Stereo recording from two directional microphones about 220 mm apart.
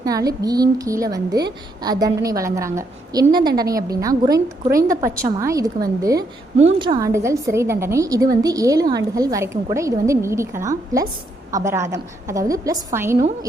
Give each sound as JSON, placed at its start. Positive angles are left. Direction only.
{"t": 0.0, "sound": "a woman's voice", "side_deg": -15}